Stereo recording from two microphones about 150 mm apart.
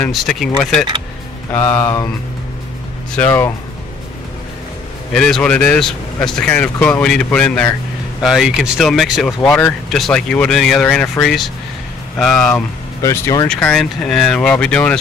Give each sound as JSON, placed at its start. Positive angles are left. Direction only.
{"t": 0.0, "sound": "speech", "side_deg": 0}
{"t": 3.2, "sound": "speech", "side_deg": 15}
{"t": 5.1, "sound": "speech", "side_deg": 5}
{"t": 13.0, "sound": "speech", "side_deg": 20}
{"t": 13.5, "sound": "speech", "side_deg": 5}